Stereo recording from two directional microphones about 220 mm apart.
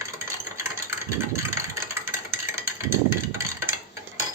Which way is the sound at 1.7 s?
10° right (ahead or behind).